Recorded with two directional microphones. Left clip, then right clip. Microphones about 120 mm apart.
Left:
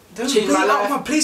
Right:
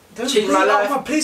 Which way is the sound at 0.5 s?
10° left (ahead or behind).